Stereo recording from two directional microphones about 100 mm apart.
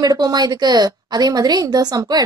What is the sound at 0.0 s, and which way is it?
A woman's voice, 40° right (ahead or behind).